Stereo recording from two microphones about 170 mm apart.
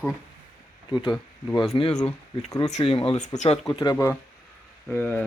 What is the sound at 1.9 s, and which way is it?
Speech, 5° left (ahead or behind).